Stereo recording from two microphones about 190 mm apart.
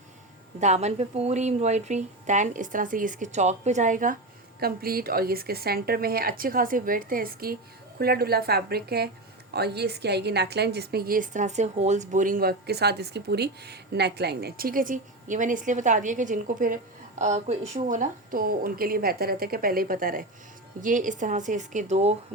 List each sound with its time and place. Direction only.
0.6 s a woman's voice: 35° right (ahead or behind)